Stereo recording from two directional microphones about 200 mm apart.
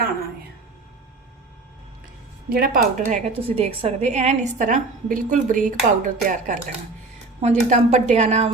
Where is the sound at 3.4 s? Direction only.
30° right (ahead or behind).